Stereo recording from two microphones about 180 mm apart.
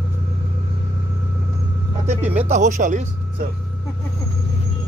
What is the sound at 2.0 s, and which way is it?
Speech, 40° right (ahead or behind).